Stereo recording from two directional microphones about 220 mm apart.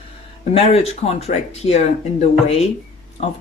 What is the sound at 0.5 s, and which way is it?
Speech, 30° left (ahead or behind).